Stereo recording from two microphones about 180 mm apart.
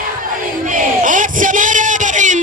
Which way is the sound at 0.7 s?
45° right (ahead or behind).